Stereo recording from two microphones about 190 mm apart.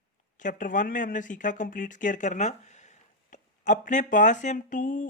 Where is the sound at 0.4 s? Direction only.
45° left (ahead or behind).